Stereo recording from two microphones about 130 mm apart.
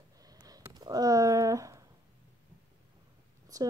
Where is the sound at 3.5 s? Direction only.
30° right (ahead or behind).